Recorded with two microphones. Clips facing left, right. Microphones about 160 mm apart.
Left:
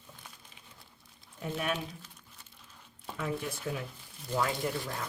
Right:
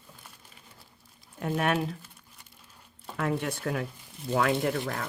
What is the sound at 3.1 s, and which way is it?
Speech, 70° right (ahead or behind).